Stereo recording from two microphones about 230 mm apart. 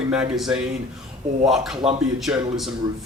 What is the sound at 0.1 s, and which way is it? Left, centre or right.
Speech, centre.